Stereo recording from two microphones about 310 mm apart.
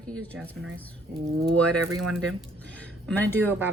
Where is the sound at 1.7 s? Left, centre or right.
Right.